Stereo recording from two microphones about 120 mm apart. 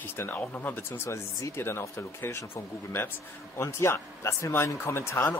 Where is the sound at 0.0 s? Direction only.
20° left (ahead or behind).